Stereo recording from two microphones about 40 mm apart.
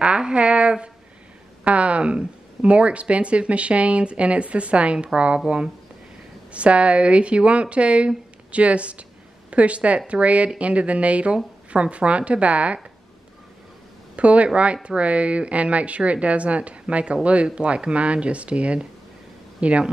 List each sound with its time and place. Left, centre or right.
0.0 s a woman's voice: right
6.5 s speech: right
14.1 s speech: right